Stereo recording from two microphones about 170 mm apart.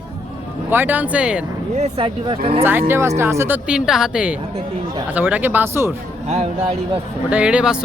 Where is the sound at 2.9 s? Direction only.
15° right (ahead or behind).